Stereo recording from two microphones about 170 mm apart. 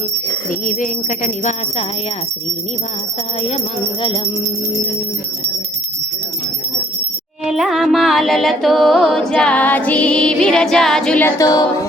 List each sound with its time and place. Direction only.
0.6 s music: 50° left (ahead or behind)
7.4 s music: centre (ahead or behind)
11.4 s music: 25° left (ahead or behind)